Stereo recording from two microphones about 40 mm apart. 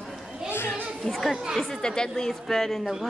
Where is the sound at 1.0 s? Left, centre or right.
Centre.